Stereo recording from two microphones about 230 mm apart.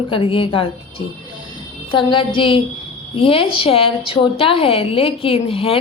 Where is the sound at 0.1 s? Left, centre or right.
Left.